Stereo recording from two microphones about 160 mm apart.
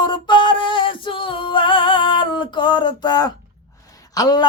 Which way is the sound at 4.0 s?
25° left (ahead or behind).